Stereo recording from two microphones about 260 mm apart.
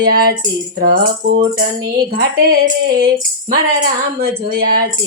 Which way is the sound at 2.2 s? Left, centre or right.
Right.